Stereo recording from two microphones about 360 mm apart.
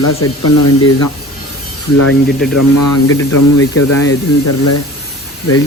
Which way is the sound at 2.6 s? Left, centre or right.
Left.